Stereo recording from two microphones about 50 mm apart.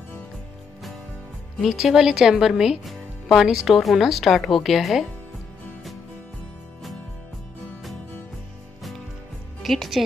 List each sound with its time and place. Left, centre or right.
1.7 s a woman's voice: centre
2.8 s music: centre
3.4 s a woman's voice: centre
9.6 s a woman's voice: centre